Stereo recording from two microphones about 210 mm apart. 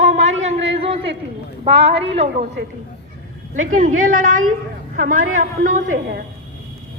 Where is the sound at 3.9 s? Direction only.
40° right (ahead or behind).